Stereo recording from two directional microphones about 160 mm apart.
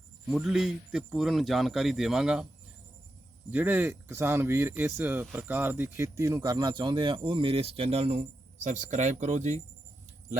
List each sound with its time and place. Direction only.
0.3 s a man's voice: 5° right (ahead or behind)
3.5 s speech: 10° right (ahead or behind); by 9.6 s 45° right (ahead or behind)